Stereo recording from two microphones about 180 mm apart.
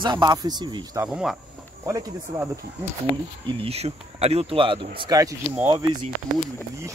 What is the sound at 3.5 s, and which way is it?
Speech, 30° right (ahead or behind).